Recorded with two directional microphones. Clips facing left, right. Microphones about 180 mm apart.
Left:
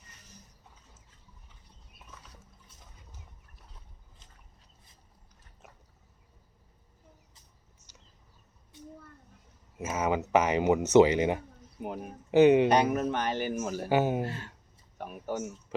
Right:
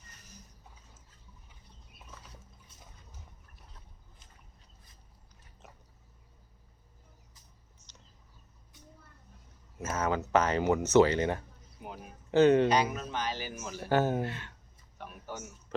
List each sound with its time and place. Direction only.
9.7 s speech: 15° left (ahead or behind)
11.8 s speech: 55° left (ahead or behind)
12.3 s speech: 15° left (ahead or behind)
12.6 s speech: 60° left (ahead or behind)
13.8 s speech: 10° left (ahead or behind)
14.3 s speech: 35° left (ahead or behind)
15.3 s a man's voice: 50° left (ahead or behind)